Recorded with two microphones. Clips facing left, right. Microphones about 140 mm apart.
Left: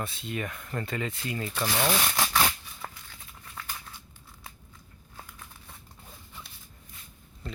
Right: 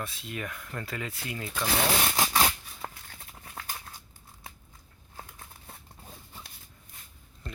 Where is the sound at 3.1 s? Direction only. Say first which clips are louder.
Right 1 dB; 40° right (ahead or behind).